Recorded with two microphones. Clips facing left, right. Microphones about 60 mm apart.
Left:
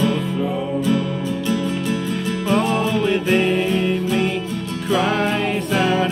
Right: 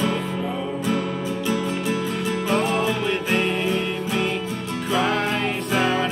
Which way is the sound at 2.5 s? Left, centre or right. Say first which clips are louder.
Left 4 dB; centre.